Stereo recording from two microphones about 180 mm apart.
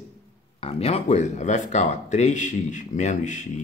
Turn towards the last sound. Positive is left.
turn(degrees=40)  # may be behind; listen again after turning